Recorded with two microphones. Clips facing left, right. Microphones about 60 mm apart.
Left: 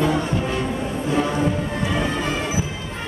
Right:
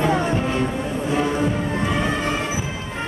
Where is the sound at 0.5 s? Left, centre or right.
Centre.